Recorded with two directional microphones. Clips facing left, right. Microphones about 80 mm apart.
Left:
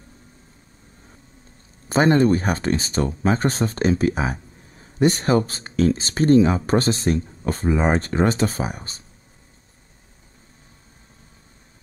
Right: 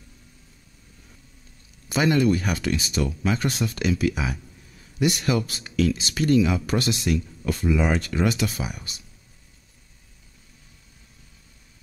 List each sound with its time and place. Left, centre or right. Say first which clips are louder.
1.9 s speech: left 4 dB; left